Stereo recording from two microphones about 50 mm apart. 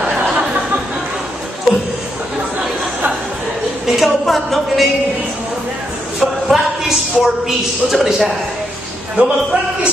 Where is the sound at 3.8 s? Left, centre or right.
Centre.